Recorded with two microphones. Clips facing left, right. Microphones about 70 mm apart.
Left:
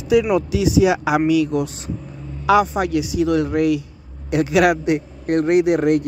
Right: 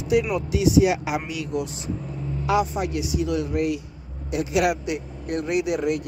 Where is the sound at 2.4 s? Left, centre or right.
Left.